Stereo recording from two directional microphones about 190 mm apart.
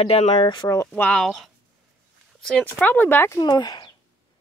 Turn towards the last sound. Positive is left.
turn(degrees=20)  # may be behind; listen again after turning